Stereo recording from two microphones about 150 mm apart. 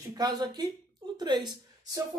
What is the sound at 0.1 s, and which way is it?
A woman's voice, 25° right (ahead or behind).